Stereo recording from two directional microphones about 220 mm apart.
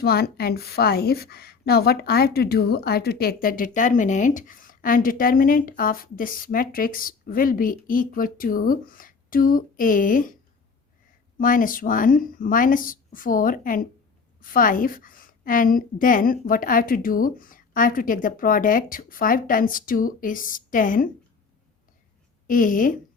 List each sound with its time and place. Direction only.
0.0 s a woman's voice: 45° left (ahead or behind)
11.3 s a woman's voice: 40° left (ahead or behind)
22.4 s a woman's voice: 40° left (ahead or behind)